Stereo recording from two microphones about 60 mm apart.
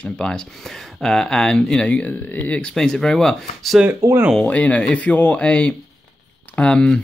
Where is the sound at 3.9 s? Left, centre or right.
Right.